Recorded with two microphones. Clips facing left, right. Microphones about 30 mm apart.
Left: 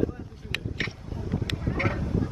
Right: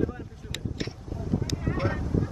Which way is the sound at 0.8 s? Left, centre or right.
Left.